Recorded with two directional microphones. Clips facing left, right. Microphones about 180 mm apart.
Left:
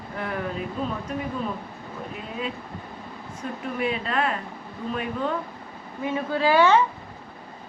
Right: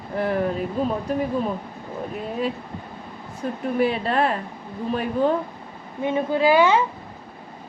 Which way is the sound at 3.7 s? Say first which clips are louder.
Right 5 dB; 35° right (ahead or behind).